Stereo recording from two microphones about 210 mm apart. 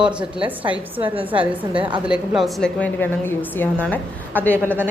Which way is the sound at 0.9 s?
25° right (ahead or behind).